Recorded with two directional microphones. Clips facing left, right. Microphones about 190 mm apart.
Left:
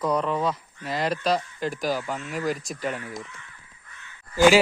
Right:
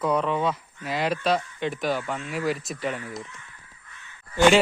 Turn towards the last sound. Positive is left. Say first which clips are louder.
# left 1 dB
turn(degrees=5)  # may be behind; listen again after turning